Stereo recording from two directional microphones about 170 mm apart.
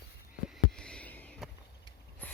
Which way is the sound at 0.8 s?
5° left (ahead or behind).